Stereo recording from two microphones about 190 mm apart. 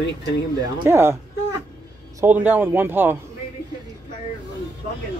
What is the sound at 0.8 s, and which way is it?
Speech, 15° right (ahead or behind).